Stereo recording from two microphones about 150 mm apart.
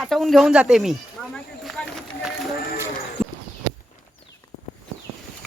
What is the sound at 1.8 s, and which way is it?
Run, 10° left (ahead or behind).